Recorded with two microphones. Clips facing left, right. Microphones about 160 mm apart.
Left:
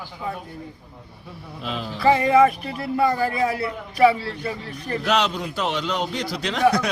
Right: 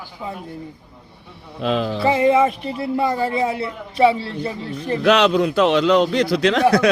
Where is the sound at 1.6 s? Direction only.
90° right.